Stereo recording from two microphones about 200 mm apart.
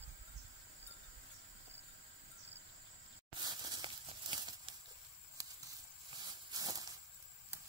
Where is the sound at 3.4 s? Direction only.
20° right (ahead or behind).